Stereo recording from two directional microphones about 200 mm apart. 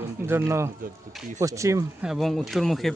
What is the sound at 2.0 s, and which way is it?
Speech, centre (ahead or behind).